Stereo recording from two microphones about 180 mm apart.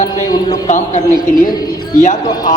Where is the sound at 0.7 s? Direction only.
45° left (ahead or behind).